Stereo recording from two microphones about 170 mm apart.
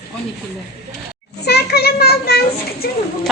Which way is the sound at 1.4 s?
70° left (ahead or behind).